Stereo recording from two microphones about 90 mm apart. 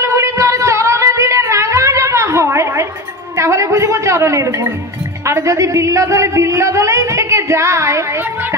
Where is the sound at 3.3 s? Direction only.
35° right (ahead or behind).